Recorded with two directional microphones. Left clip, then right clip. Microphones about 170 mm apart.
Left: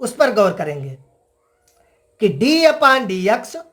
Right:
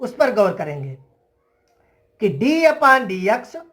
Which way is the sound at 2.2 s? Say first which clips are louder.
Left 2 dB; 35° left (ahead or behind).